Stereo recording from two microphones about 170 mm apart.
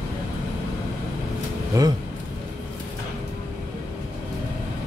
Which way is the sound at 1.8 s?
20° right (ahead or behind).